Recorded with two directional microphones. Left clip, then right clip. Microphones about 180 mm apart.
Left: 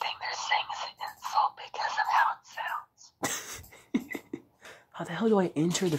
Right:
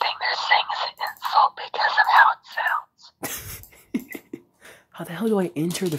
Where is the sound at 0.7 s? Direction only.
35° right (ahead or behind).